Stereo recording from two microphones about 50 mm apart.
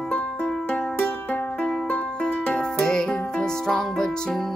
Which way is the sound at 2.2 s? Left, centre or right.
Left.